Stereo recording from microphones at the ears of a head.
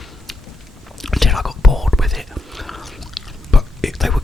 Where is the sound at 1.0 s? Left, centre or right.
Centre.